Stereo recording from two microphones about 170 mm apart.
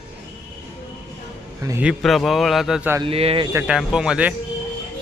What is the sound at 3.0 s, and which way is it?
Speech, 35° right (ahead or behind).